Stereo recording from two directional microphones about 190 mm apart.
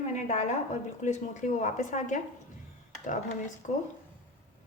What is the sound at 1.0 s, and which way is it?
A woman's voice, 40° left (ahead or behind).